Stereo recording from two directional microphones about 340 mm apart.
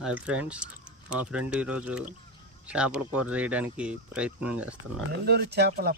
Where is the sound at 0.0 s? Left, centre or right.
Centre.